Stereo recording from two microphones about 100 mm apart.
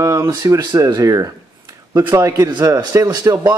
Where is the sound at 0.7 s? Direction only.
35° right (ahead or behind).